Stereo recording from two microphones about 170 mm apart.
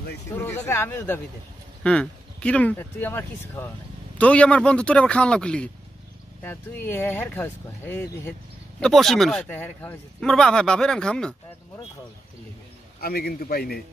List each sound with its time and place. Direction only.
0.3 s speech: 15° left (ahead or behind)
13.0 s a man's voice: 60° left (ahead or behind)